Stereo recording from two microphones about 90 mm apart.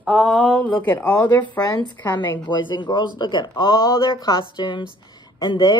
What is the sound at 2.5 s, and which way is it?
Speech, 60° left (ahead or behind).